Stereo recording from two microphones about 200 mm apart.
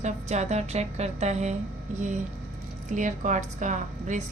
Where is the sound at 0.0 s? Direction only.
35° right (ahead or behind).